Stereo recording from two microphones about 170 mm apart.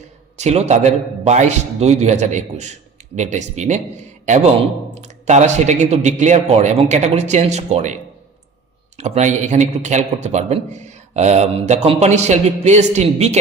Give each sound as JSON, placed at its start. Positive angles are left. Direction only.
{"t": 0.3, "sound": "speech", "side_deg": -40}
{"t": 4.9, "sound": "speech", "side_deg": -40}
{"t": 9.0, "sound": "speech", "side_deg": -40}